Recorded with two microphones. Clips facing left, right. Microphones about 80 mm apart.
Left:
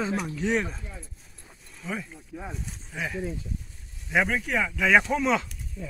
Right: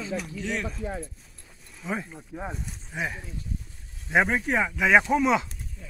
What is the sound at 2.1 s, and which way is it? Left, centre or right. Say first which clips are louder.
A man's voice: right 3 dB; centre.